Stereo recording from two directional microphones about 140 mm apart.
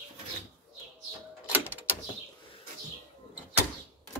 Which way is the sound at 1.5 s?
10° right (ahead or behind).